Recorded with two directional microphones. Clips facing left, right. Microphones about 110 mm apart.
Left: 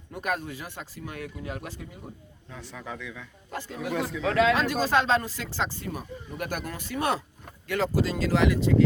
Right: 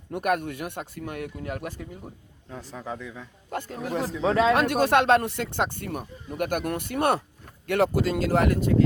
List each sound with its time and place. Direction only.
0.1 s speech: 60° right (ahead or behind)
2.5 s speech: 40° right (ahead or behind)
3.5 s speech: 50° right (ahead or behind)
3.8 s speech: 35° right (ahead or behind)
4.5 s speech: 60° right (ahead or behind)